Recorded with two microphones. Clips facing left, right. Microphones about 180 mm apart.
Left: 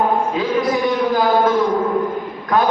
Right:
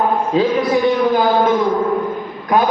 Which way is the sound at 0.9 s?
20° right (ahead or behind).